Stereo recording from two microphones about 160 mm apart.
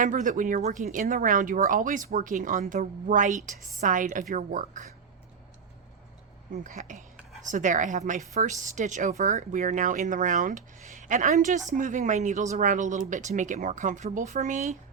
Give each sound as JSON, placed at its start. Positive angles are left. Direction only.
{"t": 0.0, "sound": "a woman's voice", "side_deg": -50}
{"t": 6.6, "sound": "a woman's voice", "side_deg": -50}